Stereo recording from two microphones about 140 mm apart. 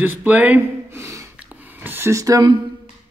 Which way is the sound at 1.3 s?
15° right (ahead or behind).